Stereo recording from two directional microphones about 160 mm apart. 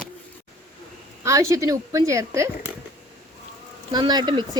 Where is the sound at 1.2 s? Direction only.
20° right (ahead or behind).